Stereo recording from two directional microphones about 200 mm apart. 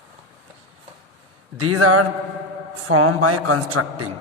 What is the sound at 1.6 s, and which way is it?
Speech, 90° right.